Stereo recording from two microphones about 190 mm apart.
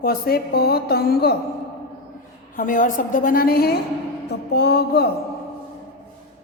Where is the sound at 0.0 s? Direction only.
55° left (ahead or behind).